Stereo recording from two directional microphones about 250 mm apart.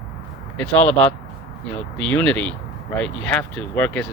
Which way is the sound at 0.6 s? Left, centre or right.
Centre.